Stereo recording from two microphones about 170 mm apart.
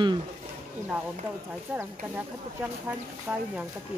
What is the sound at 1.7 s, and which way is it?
Speech, 10° right (ahead or behind).